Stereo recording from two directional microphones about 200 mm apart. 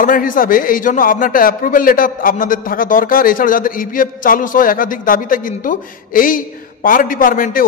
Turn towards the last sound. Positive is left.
turn(degrees=45)  # may be behind; listen again after turning